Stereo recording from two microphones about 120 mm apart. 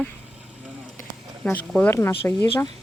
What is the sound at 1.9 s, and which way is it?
Speech, 20° left (ahead or behind).